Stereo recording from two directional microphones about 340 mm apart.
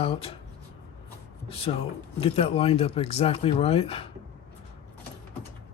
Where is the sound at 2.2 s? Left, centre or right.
Centre.